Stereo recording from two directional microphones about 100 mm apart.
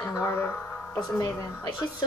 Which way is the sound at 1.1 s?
35° left (ahead or behind).